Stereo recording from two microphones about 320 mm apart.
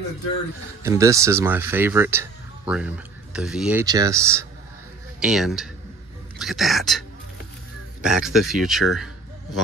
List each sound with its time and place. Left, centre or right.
0.8 s speech: centre
8.0 s speech: centre